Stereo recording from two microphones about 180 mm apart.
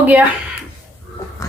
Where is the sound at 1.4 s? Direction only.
20° left (ahead or behind).